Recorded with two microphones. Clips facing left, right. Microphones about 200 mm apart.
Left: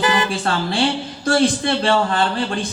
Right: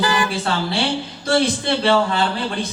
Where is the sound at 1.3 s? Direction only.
50° left (ahead or behind).